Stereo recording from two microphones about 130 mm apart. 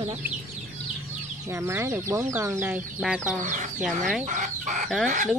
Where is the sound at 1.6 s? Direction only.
20° right (ahead or behind).